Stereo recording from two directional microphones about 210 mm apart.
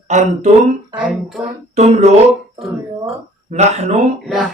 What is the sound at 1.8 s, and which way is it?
Speech, 30° right (ahead or behind).